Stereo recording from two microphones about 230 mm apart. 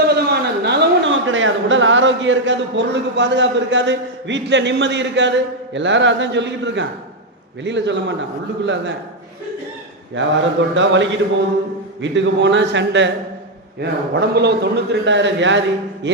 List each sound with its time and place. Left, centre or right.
0.0 s a man's voice: right
10.2 s a man's voice: right
14.2 s a man's voice: right